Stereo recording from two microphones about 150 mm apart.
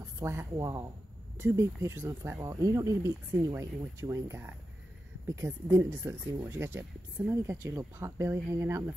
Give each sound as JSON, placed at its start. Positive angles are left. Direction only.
{"t": 0.2, "sound": "speech", "side_deg": -15}